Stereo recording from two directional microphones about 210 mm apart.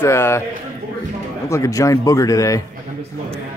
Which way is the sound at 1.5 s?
15° left (ahead or behind).